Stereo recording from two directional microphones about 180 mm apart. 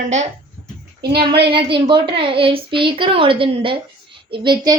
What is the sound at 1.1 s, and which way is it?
Speech, 60° right (ahead or behind).